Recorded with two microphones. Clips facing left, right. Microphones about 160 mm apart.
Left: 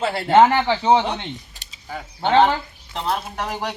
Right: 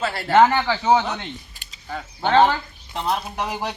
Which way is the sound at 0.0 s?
25° left (ahead or behind).